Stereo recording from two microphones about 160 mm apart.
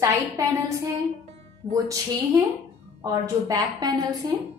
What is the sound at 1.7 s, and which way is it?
A woman's voice, 20° right (ahead or behind).